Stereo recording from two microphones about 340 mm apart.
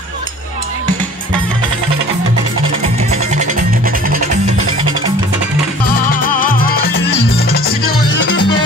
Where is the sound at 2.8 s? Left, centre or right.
Centre.